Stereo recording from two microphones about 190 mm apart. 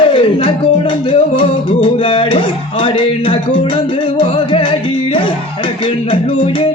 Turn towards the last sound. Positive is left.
turn(degrees=30)  # may be behind; listen again after turning